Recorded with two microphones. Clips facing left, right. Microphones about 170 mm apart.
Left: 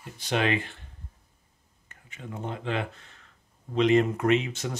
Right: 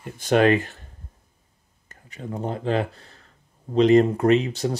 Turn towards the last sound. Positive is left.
turn(degrees=-35)  # may be behind; listen again after turning